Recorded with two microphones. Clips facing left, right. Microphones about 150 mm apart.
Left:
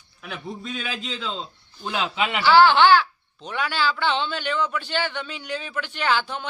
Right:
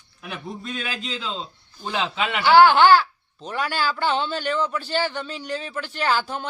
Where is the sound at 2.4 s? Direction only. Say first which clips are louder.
Right 2 dB; 50° right (ahead or behind).